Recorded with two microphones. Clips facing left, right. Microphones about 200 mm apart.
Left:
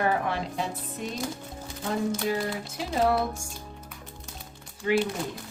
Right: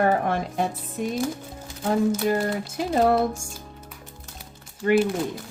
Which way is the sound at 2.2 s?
50° right (ahead or behind).